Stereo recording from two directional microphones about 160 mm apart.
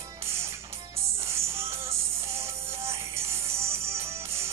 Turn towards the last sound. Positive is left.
turn(degrees=-15)  # may be behind; listen again after turning